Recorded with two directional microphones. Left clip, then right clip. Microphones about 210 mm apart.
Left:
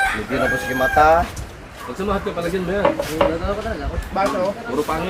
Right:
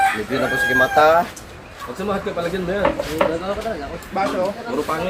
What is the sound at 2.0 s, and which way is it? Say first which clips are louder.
Speech: left 1 dB; 5° right (ahead or behind).